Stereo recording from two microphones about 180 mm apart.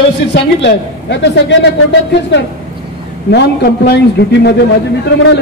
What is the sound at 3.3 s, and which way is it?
A man's voice, 65° left (ahead or behind).